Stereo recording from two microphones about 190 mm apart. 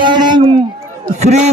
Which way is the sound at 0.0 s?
25° right (ahead or behind).